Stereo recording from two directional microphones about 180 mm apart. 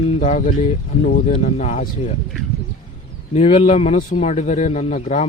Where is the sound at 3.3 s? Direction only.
35° left (ahead or behind).